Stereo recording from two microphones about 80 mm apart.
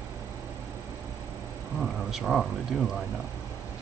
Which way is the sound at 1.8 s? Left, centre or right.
Centre.